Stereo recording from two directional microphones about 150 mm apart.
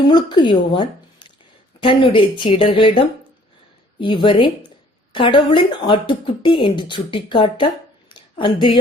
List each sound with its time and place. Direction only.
0.1 s speech: 30° left (ahead or behind)
4.0 s speech: 35° left (ahead or behind)
8.1 s a sound: 35° left (ahead or behind)